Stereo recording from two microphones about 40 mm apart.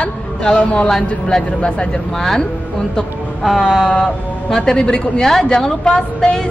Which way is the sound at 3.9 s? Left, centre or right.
Centre.